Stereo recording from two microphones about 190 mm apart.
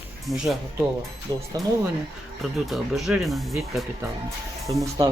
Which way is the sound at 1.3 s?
20° right (ahead or behind).